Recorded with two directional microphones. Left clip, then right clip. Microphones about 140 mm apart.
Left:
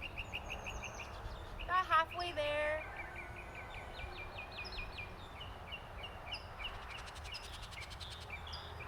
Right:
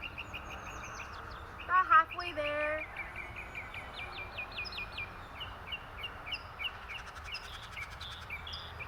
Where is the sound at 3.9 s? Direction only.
20° left (ahead or behind).